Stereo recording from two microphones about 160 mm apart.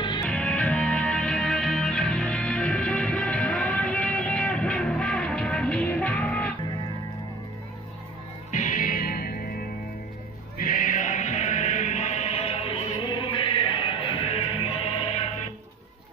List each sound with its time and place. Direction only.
0.2 s music: 5° left (ahead or behind)
8.5 s music: 50° left (ahead or behind); by 9.5 s 70° left (ahead or behind)
10.6 s music: 55° left (ahead or behind); by 15.0 s 35° left (ahead or behind)